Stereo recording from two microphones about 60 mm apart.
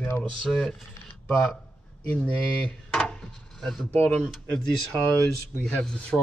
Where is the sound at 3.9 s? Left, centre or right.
Left.